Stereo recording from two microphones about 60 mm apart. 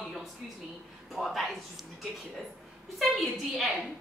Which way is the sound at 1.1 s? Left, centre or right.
Centre.